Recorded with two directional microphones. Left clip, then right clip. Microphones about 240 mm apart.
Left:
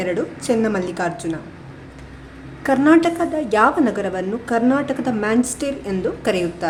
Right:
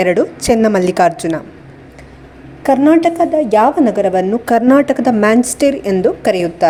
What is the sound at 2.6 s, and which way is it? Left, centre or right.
A woman's voice, centre.